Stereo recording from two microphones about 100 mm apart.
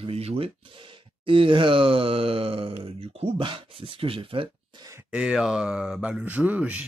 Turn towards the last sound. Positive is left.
turn(degrees=-15)  # may be behind; listen again after turning